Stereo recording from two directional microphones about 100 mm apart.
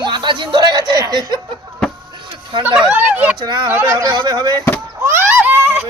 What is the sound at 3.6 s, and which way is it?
Speech, 20° right (ahead or behind).